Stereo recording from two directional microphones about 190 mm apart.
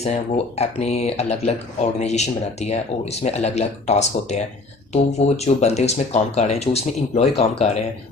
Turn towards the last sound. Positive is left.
turn(degrees=35)  # may be behind; listen again after turning